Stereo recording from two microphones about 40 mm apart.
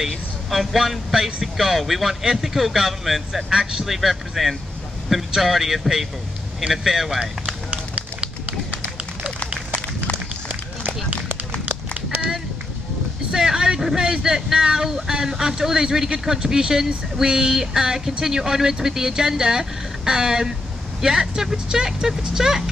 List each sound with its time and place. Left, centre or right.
0.5 s speech: centre
7.7 s run: right
13.3 s a sound: centre
13.9 s speech: centre